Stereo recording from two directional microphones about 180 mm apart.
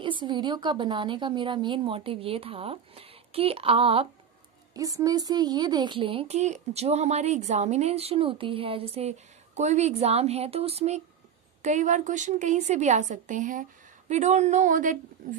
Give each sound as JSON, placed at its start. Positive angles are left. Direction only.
{"t": 0.0, "sound": "a woman's voice", "side_deg": -25}
{"t": 4.7, "sound": "a woman's voice", "side_deg": -20}